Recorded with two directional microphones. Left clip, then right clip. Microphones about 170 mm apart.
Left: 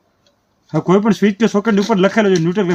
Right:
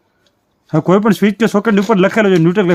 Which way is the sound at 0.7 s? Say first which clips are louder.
Right 2 dB; 80° right.